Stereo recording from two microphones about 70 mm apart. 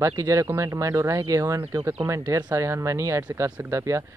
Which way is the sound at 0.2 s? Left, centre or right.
Right.